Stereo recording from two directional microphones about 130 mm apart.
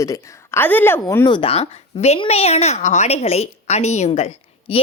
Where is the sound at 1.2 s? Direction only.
40° left (ahead or behind).